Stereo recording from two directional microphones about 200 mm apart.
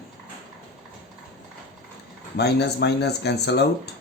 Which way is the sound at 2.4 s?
55° left (ahead or behind).